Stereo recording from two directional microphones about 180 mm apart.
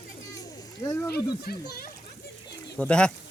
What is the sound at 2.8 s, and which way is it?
Speech, 5° left (ahead or behind).